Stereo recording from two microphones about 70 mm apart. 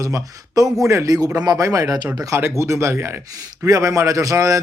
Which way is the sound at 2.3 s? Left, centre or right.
Right.